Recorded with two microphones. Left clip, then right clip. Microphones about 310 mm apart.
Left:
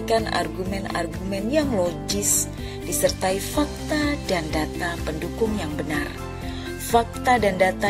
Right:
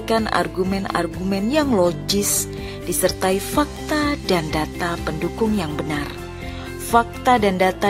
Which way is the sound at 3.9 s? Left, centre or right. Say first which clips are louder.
Right 4 dB; centre.